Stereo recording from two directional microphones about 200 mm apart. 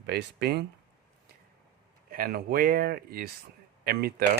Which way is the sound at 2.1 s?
45° right (ahead or behind).